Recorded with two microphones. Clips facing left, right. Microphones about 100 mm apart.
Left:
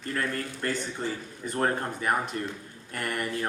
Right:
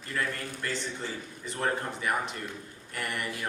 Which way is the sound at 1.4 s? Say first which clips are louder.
Left 3 dB; 45° left (ahead or behind).